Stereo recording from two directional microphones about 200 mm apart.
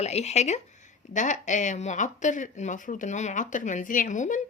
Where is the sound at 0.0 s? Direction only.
35° left (ahead or behind).